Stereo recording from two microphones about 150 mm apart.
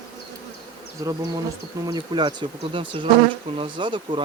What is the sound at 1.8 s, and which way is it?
Speech, 30° right (ahead or behind).